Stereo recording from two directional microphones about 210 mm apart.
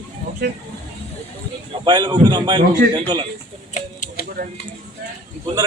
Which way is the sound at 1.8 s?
20° right (ahead or behind).